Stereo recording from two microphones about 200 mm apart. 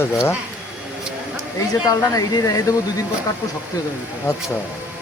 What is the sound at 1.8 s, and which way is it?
Speech, 15° left (ahead or behind).